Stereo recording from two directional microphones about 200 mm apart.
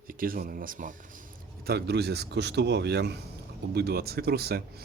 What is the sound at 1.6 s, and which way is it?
Speech, 55° right (ahead or behind).